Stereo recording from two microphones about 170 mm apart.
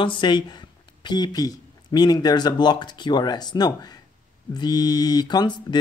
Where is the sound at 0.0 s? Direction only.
30° left (ahead or behind).